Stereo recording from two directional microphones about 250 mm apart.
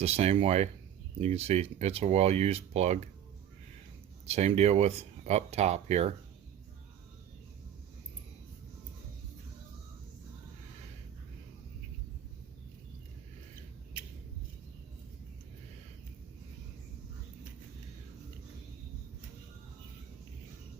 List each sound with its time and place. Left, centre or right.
0.0 s speech: right
4.3 s speech: right